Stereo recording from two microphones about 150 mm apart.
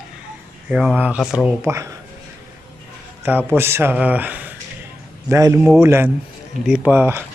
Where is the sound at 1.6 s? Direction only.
20° right (ahead or behind).